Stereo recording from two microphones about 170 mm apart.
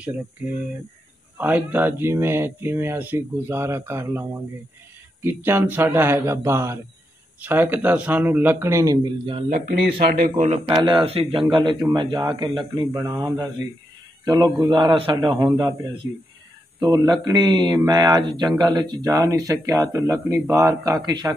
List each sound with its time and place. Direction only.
1.4 s speech: 10° right (ahead or behind); by 9.4 s 25° right (ahead or behind)
9.5 s speech: 65° right (ahead or behind)
10.2 s a man's voice: 50° right (ahead or behind)
10.9 s a man's voice: 35° right (ahead or behind); by 13.5 s 15° right (ahead or behind)
14.3 s a man's voice: 25° right (ahead or behind)
16.0 s a man's voice: 20° right (ahead or behind)